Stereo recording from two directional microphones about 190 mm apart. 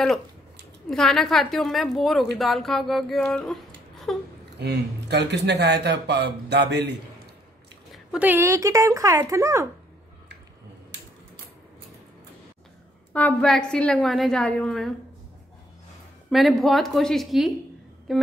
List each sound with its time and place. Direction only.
0.8 s a woman's voice: centre (ahead or behind)
4.6 s speech: 65° right (ahead or behind)
7.9 s speech: 5° right (ahead or behind)
13.1 s a woman's voice: 5° left (ahead or behind)
16.3 s a woman's voice: centre (ahead or behind)